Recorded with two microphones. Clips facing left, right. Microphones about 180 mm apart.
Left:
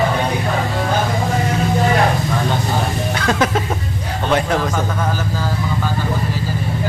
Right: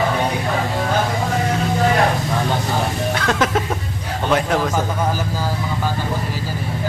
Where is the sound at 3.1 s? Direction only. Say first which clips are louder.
Left 2 dB; centre (ahead or behind).